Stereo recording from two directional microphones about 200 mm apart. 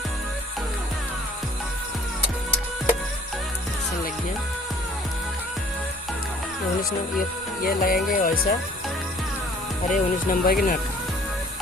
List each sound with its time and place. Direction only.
7.6 s speech: 45° left (ahead or behind)
9.9 s speech: 45° left (ahead or behind)